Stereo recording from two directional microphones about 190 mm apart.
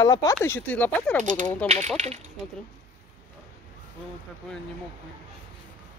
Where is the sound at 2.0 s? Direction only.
35° right (ahead or behind).